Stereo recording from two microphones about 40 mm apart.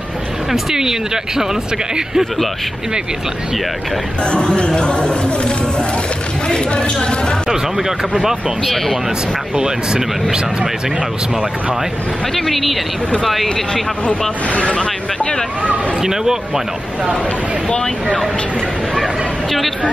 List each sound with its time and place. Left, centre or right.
0.5 s speech: centre
4.2 s speech: left
7.5 s speech: centre
12.4 s speech: centre
14.5 s speech: left
16.0 s speech: centre
17.6 s speech: left